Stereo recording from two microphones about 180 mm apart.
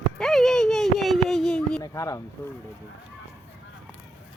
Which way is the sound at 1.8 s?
20° left (ahead or behind).